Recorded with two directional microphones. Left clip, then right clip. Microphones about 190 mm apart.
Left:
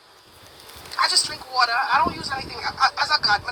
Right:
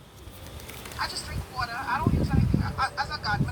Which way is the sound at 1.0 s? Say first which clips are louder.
Left 13 dB; 55° left (ahead or behind).